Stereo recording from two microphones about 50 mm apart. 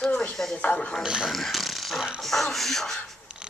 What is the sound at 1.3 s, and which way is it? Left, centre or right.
Speech, centre.